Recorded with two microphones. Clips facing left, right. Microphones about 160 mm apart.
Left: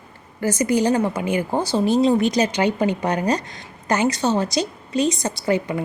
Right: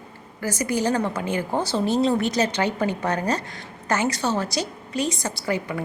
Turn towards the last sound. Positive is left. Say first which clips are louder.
# left 5 dB
turn(degrees=20)  # may be behind; listen again after turning